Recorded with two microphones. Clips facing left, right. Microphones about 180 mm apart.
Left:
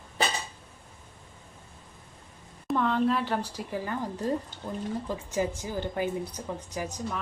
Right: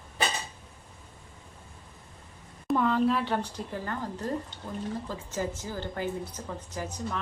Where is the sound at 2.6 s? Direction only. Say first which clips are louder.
Right 1 dB; 5° right (ahead or behind).